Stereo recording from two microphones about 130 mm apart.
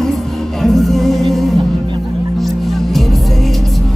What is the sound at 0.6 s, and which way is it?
Music, centre (ahead or behind).